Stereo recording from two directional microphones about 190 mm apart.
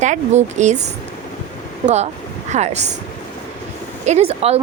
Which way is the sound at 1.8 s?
35° right (ahead or behind).